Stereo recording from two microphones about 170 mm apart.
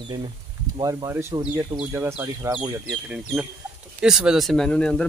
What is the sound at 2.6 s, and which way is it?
Speech, 5° right (ahead or behind).